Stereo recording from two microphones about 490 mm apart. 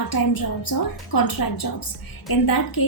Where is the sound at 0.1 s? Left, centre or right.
Left.